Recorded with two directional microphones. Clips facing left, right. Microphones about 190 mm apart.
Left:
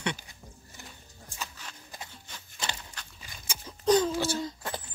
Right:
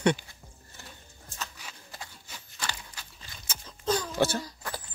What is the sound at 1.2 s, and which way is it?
Music, 15° left (ahead or behind).